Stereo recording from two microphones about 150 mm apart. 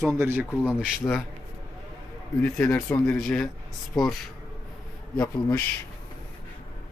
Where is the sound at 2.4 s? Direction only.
10° left (ahead or behind).